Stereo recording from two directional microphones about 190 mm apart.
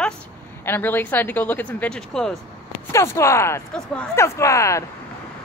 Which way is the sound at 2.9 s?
15° left (ahead or behind).